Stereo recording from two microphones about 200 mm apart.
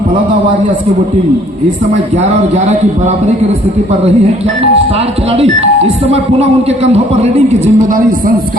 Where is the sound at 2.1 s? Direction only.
35° right (ahead or behind).